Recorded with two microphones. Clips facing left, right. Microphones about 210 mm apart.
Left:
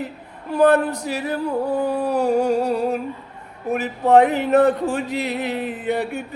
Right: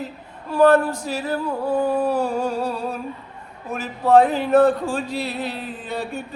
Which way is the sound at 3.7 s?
20° left (ahead or behind).